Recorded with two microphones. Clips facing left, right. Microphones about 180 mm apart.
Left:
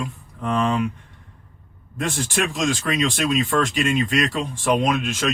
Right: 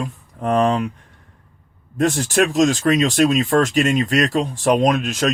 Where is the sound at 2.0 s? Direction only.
45° right (ahead or behind).